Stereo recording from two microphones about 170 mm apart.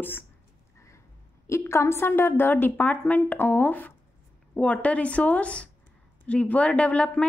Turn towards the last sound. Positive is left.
turn(degrees=5)  # may be behind; listen again after turning